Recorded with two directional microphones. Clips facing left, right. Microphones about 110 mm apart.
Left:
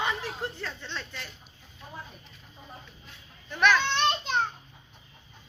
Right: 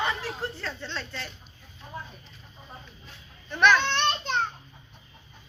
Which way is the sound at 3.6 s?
5° left (ahead or behind).